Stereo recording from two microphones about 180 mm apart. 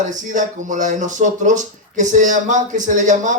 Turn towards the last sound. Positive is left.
turn(degrees=-45)  # may be behind; listen again after turning